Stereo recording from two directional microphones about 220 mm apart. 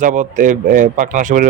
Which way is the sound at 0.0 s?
35° right (ahead or behind).